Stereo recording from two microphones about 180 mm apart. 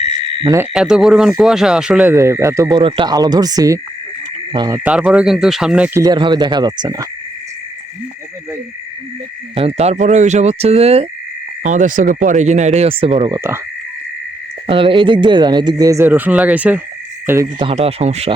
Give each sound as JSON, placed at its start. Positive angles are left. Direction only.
{"t": 0.4, "sound": "speech", "side_deg": -15}
{"t": 0.7, "sound": "speech", "side_deg": -5}
{"t": 4.8, "sound": "speech", "side_deg": -5}
{"t": 6.0, "sound": "speech", "side_deg": -25}
{"t": 9.6, "sound": "speech", "side_deg": -35}
{"t": 14.7, "sound": "speech", "side_deg": -30}
{"t": 17.7, "sound": "speech", "side_deg": -35}